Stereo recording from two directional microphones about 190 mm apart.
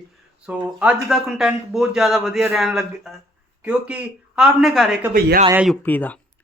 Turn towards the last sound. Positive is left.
turn(degrees=10)  # may be behind; listen again after turning